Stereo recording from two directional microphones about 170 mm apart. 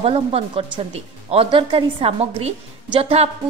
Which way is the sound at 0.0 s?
35° right (ahead or behind).